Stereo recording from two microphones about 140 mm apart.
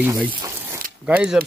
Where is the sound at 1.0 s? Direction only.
5° right (ahead or behind).